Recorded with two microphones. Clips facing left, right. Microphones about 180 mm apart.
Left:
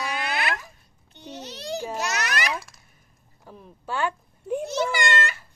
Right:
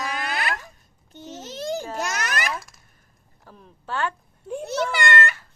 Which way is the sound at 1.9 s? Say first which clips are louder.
Even; 50° right (ahead or behind).